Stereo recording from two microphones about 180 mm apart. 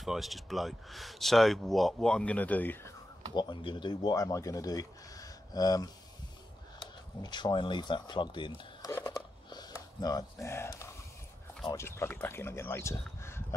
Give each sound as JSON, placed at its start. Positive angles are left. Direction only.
{"t": 0.0, "sound": "speech", "side_deg": 0}
{"t": 3.3, "sound": "speech", "side_deg": 25}
{"t": 8.9, "sound": "a sound", "side_deg": 20}
{"t": 11.7, "sound": "speech", "side_deg": 15}